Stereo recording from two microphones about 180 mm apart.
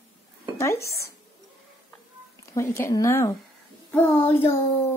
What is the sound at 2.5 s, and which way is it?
Speech, 15° left (ahead or behind).